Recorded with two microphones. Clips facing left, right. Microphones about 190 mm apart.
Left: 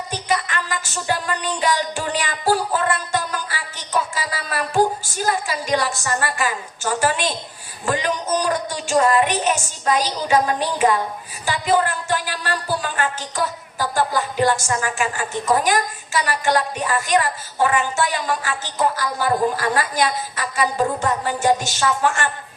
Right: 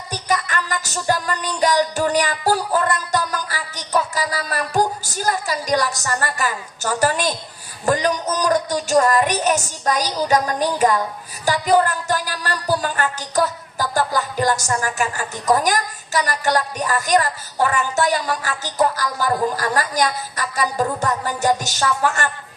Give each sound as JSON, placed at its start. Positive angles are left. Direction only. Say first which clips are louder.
{"t": 0.1, "sound": "music", "louder": "right 1 dB", "side_deg": -40}
{"t": 7.9, "sound": "a sound", "louder": "right 2 dB", "side_deg": -40}
{"t": 11.4, "sound": "a woman's voice", "louder": "right 3 dB", "side_deg": -40}